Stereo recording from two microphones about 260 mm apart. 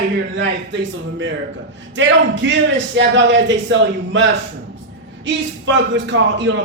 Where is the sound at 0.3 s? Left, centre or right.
Right.